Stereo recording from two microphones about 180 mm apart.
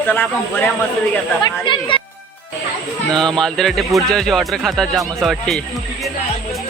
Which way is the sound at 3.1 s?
5° left (ahead or behind).